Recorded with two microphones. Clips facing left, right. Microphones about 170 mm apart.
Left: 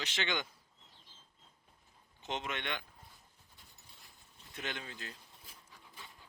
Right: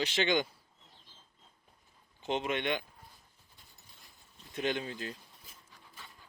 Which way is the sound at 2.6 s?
15° right (ahead or behind).